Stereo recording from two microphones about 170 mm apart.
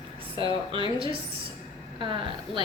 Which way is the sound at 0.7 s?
30° right (ahead or behind).